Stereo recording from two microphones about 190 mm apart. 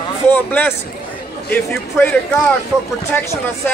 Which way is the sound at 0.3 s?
10° left (ahead or behind).